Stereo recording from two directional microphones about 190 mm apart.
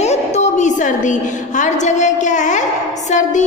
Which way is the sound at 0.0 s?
35° left (ahead or behind).